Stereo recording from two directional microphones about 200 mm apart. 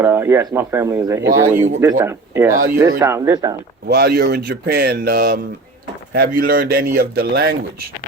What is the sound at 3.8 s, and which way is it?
Speech, 50° right (ahead or behind).